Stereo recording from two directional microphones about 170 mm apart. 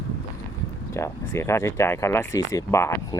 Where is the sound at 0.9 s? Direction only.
15° left (ahead or behind).